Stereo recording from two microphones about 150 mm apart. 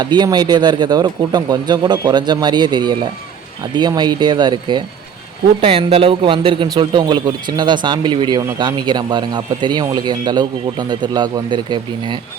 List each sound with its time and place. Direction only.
0.0 s a man's voice: 30° right (ahead or behind)